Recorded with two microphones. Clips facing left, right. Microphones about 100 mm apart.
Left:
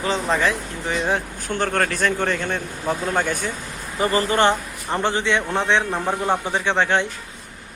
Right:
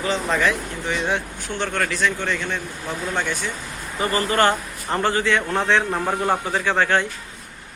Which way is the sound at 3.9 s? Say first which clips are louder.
Left 1 dB; 30° left (ahead or behind).